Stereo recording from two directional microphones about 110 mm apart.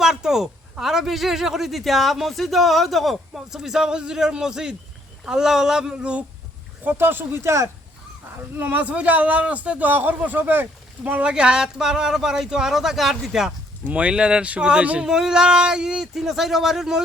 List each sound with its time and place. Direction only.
0.0 s a man's voice: 5° right (ahead or behind)
6.8 s a man's voice: 20° right (ahead or behind); by 17.0 s 5° right (ahead or behind)